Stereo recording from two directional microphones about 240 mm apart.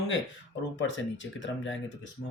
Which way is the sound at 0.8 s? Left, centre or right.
Left.